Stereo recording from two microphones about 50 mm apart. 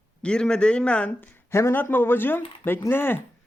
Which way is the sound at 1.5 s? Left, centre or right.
Left.